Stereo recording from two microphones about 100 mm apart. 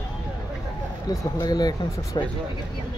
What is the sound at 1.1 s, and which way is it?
Speech, 40° left (ahead or behind).